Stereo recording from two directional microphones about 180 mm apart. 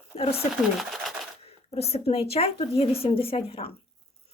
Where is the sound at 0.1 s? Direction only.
35° left (ahead or behind).